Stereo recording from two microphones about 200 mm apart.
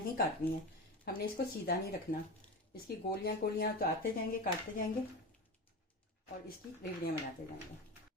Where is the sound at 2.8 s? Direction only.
50° left (ahead or behind).